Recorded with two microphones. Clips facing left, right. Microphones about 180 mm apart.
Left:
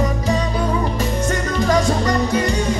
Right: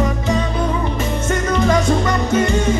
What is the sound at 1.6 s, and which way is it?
Music, 40° left (ahead or behind).